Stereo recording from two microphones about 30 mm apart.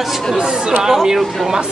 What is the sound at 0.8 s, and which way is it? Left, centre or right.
Speech, centre.